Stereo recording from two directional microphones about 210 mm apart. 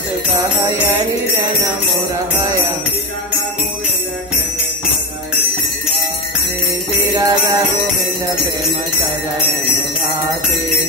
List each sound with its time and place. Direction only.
7.2 s music: 15° right (ahead or behind)